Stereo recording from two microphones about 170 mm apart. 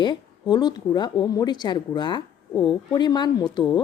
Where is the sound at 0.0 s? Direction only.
25° left (ahead or behind).